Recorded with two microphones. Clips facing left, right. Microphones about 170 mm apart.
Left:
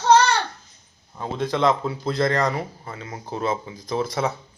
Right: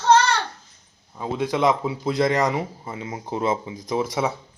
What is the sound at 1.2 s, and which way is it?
Speech, 10° right (ahead or behind).